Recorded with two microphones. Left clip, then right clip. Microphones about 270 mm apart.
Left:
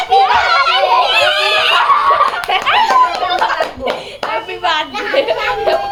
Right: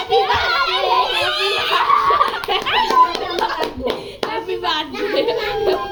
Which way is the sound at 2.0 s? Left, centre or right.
Centre.